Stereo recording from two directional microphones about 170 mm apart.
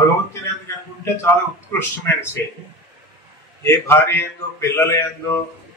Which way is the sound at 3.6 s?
15° left (ahead or behind).